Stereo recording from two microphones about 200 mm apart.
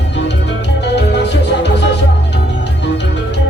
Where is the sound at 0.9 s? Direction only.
60° left (ahead or behind).